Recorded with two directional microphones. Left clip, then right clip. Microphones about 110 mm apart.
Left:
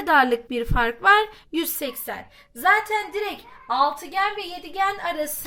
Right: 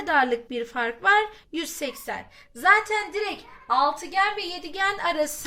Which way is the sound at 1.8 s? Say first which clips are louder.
Left 1 dB; 25° left (ahead or behind).